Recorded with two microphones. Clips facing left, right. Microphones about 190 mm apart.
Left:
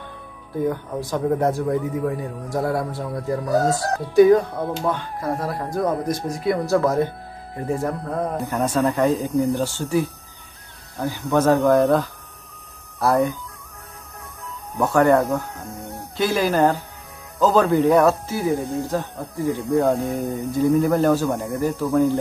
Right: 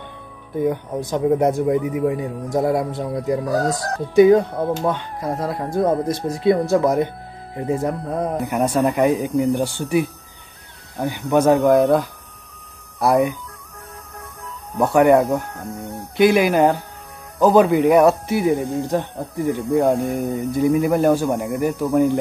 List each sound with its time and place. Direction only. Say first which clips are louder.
0.7 s speech: right 3 dB; 20° right (ahead or behind)
14.8 s speech: right 3 dB; 15° right (ahead or behind)
19.7 s speech: right 2 dB; 5° right (ahead or behind)